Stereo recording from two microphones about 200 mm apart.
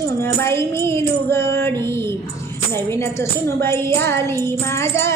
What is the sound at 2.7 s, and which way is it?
Music, 15° left (ahead or behind).